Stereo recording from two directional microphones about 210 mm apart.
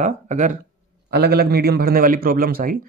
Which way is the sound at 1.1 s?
50° right (ahead or behind).